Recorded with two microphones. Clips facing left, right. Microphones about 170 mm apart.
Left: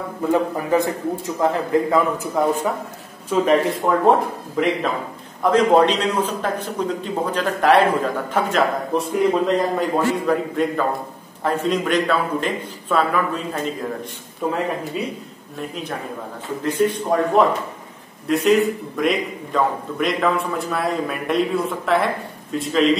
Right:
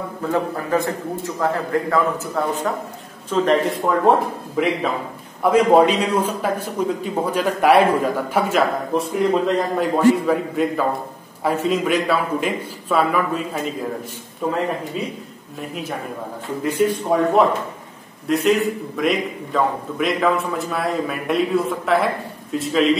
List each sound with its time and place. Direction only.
0.3 s a man's voice: 15° left (ahead or behind); by 14.6 s centre (ahead or behind)
15.7 s a man's voice: 5° right (ahead or behind)
18.2 s a man's voice: centre (ahead or behind)